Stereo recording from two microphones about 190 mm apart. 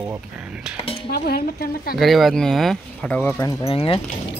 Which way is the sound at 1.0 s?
55° left (ahead or behind).